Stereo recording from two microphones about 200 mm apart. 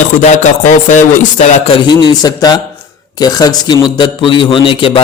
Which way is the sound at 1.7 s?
25° left (ahead or behind).